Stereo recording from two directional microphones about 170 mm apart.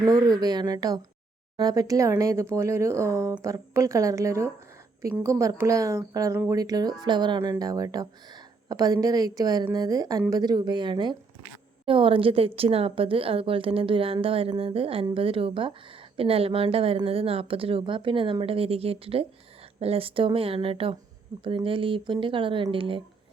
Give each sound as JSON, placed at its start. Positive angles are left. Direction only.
{"t": 0.0, "sound": "a woman's voice", "side_deg": -20}